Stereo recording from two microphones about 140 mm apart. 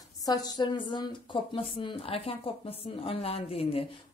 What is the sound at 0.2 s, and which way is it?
A woman's voice, 25° left (ahead or behind).